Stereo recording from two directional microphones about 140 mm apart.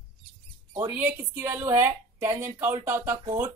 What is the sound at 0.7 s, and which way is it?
A woman's voice, 15° right (ahead or behind).